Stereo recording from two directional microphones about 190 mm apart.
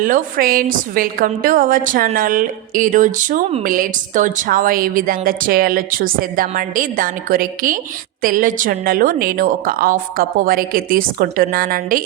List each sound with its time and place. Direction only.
0.0 s a woman's voice: 50° right (ahead or behind)